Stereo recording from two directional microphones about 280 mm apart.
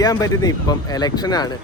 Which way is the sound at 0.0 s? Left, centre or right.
Centre.